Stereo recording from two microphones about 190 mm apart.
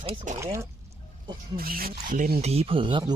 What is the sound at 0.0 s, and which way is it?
Speech, 30° right (ahead or behind).